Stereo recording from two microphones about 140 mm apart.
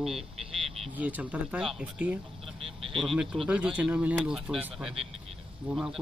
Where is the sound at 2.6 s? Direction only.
40° right (ahead or behind).